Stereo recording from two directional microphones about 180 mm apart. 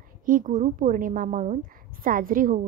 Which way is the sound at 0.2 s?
50° right (ahead or behind).